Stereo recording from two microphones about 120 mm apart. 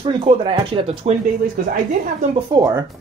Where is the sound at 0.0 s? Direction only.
50° right (ahead or behind).